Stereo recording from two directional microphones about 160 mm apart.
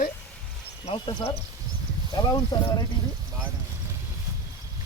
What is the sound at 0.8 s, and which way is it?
Speech, 30° left (ahead or behind).